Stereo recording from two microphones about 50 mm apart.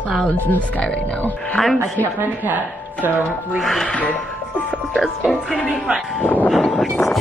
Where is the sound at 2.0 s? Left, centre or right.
Right.